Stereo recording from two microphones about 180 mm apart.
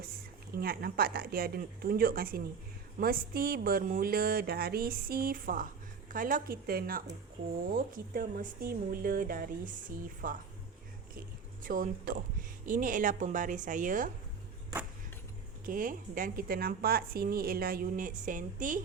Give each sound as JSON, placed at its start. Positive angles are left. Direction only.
{"t": 0.5, "sound": "speech", "side_deg": -55}
{"t": 15.6, "sound": "speech", "side_deg": -50}